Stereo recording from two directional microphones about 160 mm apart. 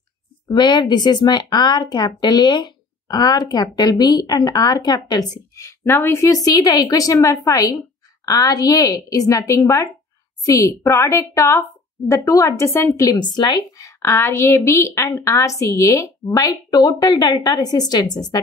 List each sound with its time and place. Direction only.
0.5 s a woman's voice: 25° left (ahead or behind)